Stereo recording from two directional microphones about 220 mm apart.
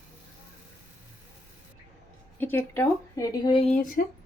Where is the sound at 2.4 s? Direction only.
10° left (ahead or behind); by 4.0 s 35° left (ahead or behind).